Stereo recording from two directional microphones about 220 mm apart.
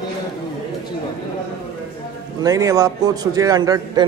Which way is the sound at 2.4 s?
15° right (ahead or behind).